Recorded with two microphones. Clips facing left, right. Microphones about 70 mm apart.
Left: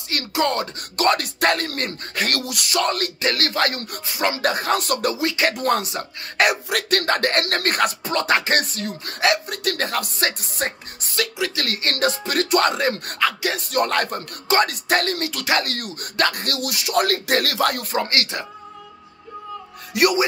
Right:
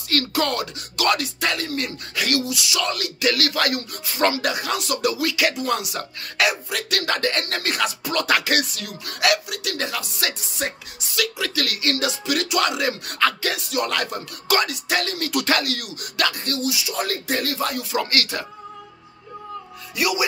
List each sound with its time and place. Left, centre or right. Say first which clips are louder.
0.3 s speech: left 5 dB; left
0.7 s speech: even; left
5.1 s speech: left 1 dB; left
5.5 s speech: left 3 dB; left
6.5 s speech: left 4 dB; left
6.9 s speech: left 3 dB; left
8.0 s speech: left 1 dB; left
11.3 s speech: left 1 dB; left
11.9 s speech: left 2 dB; left
16.3 s speech: right 1 dB; left
17.9 s speech: left 1 dB; left
19.9 s a man's voice: left 5 dB; left